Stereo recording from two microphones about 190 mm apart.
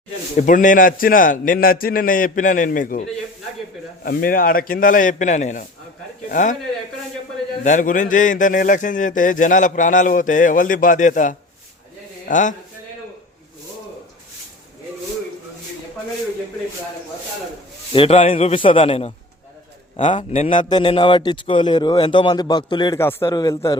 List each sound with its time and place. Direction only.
0.3 s speech: 45° left (ahead or behind)
4.0 s speech: 50° left (ahead or behind)
7.6 s a man's voice: 40° left (ahead or behind)
17.9 s a man's voice: 30° left (ahead or behind)
20.3 s speech: 40° left (ahead or behind)
20.6 s speech: 25° left (ahead or behind)